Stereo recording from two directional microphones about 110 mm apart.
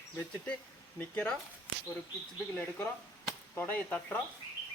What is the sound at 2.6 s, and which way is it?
A man's voice, 20° left (ahead or behind).